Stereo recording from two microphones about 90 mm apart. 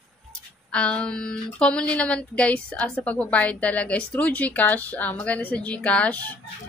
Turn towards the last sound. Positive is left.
turn(degrees=15)  # may be behind; listen again after turning